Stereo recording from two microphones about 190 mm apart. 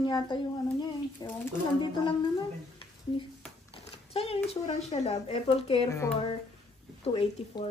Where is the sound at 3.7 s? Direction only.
30° left (ahead or behind).